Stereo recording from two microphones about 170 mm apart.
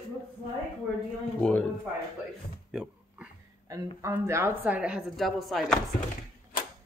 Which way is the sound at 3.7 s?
20° right (ahead or behind).